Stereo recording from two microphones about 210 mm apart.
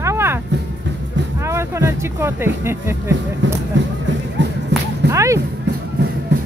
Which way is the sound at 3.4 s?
60° right (ahead or behind).